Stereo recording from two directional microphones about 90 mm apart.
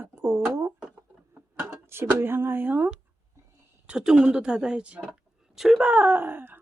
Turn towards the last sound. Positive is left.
turn(degrees=-20)  # may be behind; listen again after turning